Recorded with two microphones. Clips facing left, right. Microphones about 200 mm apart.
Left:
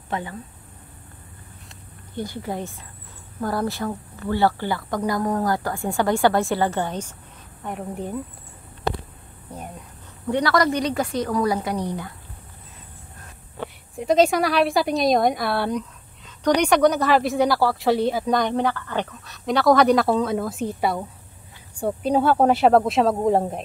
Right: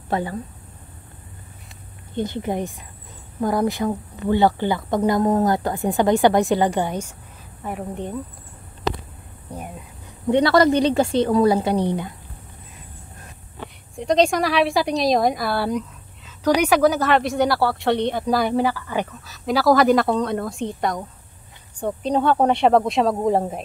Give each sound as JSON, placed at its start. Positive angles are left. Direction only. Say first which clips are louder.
{"t": 0.1, "sound": "speech", "louder": "right 5 dB", "side_deg": -35}
{"t": 2.1, "sound": "a woman's voice", "louder": "right 5 dB", "side_deg": -20}
{"t": 7.6, "sound": "speech", "louder": "right 1 dB", "side_deg": 0}
{"t": 9.5, "sound": "a sound", "louder": "right 2 dB", "side_deg": -10}
{"t": 10.2, "sound": "a woman's voice", "louder": "right 5 dB", "side_deg": -25}
{"t": 13.9, "sound": "speech", "louder": "even", "side_deg": 5}